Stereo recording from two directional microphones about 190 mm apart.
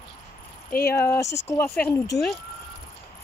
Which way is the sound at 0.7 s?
55° left (ahead or behind).